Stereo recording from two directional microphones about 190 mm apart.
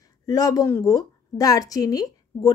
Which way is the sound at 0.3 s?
20° left (ahead or behind).